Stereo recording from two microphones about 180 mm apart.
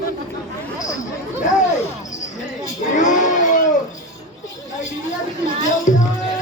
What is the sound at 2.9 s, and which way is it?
Music, 45° left (ahead or behind).